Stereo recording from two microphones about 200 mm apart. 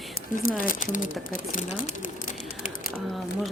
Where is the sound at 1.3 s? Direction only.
40° left (ahead or behind).